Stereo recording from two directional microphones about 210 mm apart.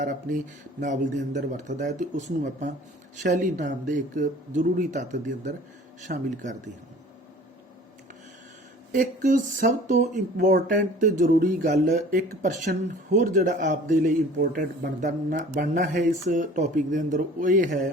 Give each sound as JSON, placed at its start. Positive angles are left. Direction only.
{"t": 0.0, "sound": "speech", "side_deg": -40}
{"t": 8.9, "sound": "speech", "side_deg": -40}